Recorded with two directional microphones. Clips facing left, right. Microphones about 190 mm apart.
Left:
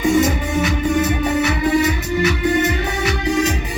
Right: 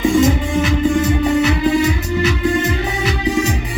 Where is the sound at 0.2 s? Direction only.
30° right (ahead or behind).